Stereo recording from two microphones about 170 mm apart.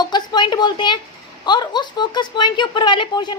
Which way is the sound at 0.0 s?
25° left (ahead or behind).